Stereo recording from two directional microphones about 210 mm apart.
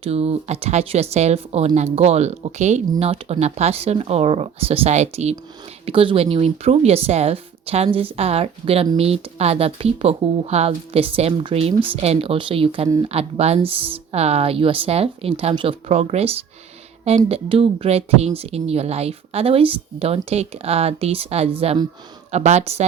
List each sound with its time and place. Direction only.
0.0 s speech: 30° right (ahead or behind)